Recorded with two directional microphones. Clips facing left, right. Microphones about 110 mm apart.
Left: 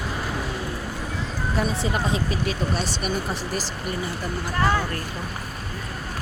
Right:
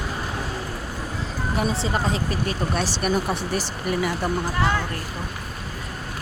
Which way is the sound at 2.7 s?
65° right (ahead or behind).